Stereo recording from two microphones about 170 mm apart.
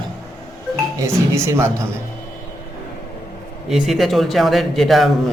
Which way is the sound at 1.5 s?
15° right (ahead or behind).